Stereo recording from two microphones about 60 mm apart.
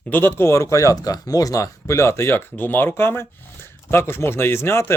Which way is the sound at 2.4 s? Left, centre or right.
Left.